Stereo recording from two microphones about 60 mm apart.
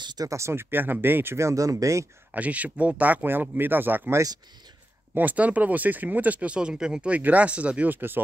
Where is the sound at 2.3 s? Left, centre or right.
Right.